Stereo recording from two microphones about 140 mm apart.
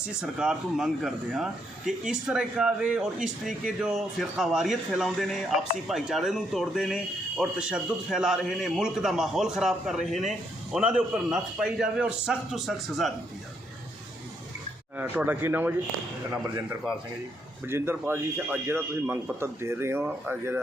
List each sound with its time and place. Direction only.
0.2 s speech: 5° right (ahead or behind)
14.9 s a man's voice: 10° right (ahead or behind)